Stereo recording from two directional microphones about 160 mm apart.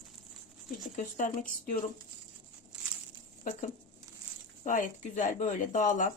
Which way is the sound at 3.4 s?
50° left (ahead or behind).